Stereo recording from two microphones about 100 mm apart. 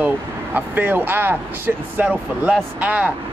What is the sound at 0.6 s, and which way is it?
Speech, 20° right (ahead or behind).